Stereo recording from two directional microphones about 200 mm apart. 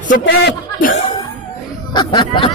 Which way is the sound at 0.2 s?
60° left (ahead or behind).